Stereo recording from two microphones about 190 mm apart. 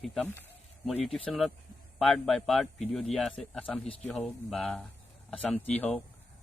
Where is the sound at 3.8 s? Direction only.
35° left (ahead or behind).